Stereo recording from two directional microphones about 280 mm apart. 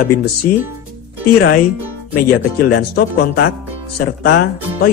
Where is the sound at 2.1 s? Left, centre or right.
Left.